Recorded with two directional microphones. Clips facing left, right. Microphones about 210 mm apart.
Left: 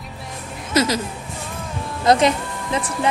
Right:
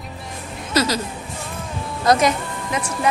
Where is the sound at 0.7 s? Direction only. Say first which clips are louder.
Left 1 dB; 20° left (ahead or behind).